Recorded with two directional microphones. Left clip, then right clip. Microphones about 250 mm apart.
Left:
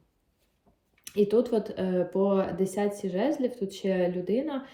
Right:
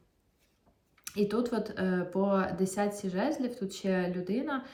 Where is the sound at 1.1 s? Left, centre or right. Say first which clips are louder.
Left 7 dB; centre.